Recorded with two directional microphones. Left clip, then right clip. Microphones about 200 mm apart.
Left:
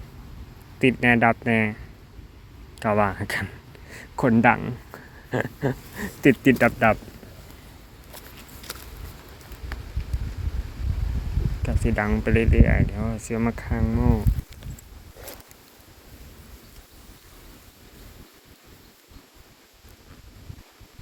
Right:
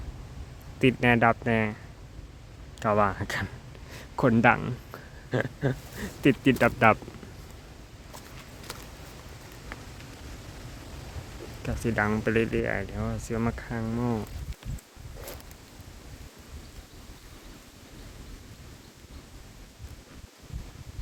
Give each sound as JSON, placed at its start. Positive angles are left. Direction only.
{"t": 0.8, "sound": "speech", "side_deg": 0}
{"t": 2.7, "sound": "speech", "side_deg": 5}
{"t": 6.0, "sound": "speech", "side_deg": 15}
{"t": 6.7, "sound": "speech", "side_deg": -10}
{"t": 8.7, "sound": "a sound", "side_deg": 35}
{"t": 9.7, "sound": "a sound", "side_deg": 50}
{"t": 11.6, "sound": "speech", "side_deg": 0}